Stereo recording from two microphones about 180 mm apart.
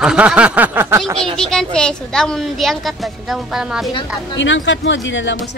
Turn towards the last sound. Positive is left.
turn(degrees=90)